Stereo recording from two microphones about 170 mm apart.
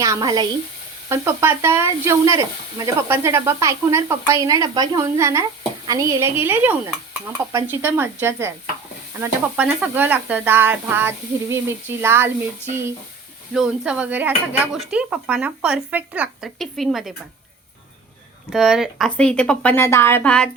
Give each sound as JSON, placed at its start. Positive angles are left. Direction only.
{"t": 0.0, "sound": "speech", "side_deg": -20}
{"t": 18.5, "sound": "speech", "side_deg": -5}